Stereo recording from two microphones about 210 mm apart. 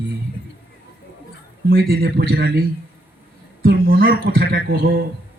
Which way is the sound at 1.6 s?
45° right (ahead or behind).